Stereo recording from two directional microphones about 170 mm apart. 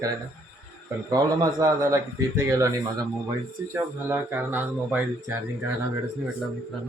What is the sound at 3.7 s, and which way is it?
Speech, 15° right (ahead or behind).